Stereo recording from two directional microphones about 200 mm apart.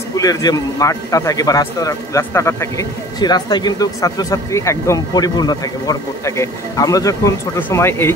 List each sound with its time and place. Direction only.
0.1 s speech: 20° left (ahead or behind)